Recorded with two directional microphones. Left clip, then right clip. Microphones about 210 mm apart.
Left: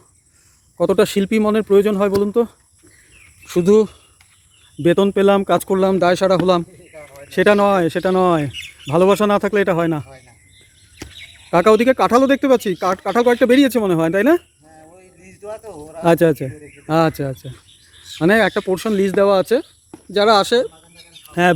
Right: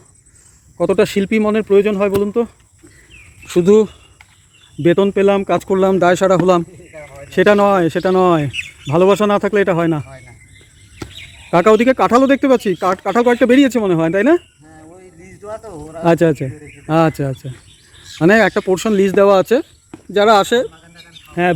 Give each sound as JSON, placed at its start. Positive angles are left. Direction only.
{"t": 0.8, "sound": "speech", "side_deg": 15}
{"t": 3.4, "sound": "speech", "side_deg": 0}
{"t": 11.5, "sound": "speech", "side_deg": 0}
{"t": 14.9, "sound": "a sound", "side_deg": 25}
{"t": 16.0, "sound": "speech", "side_deg": 5}